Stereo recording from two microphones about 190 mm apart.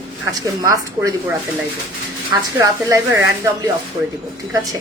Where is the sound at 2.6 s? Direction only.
15° right (ahead or behind).